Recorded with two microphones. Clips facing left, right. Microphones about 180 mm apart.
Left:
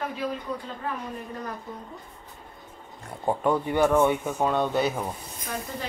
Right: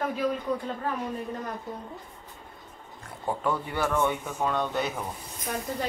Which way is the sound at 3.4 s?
20° left (ahead or behind).